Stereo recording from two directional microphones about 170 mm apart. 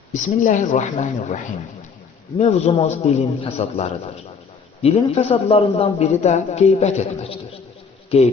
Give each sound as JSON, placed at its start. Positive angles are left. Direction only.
{"t": 0.1, "sound": "a woman's voice", "side_deg": 45}
{"t": 2.4, "sound": "a man's voice", "side_deg": 40}